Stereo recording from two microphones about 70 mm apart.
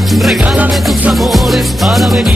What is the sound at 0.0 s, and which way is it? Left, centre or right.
Music, centre.